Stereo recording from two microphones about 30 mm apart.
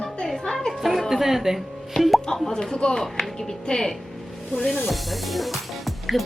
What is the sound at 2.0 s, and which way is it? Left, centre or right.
Plop, left.